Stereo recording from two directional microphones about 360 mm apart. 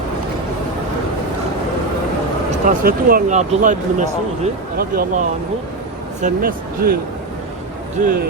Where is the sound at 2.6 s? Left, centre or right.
Right.